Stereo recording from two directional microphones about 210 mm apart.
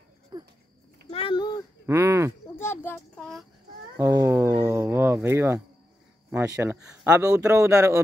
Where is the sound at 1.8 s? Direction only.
10° right (ahead or behind).